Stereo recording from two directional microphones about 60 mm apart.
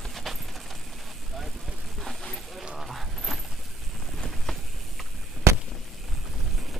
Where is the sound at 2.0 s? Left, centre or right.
Centre.